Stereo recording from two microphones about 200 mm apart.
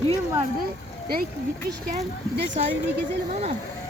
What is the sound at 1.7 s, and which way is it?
Speech, 50° right (ahead or behind).